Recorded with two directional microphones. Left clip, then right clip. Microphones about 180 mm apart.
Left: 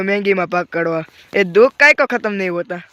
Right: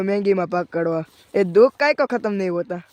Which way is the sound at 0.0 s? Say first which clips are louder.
Left 3 dB; centre (ahead or behind).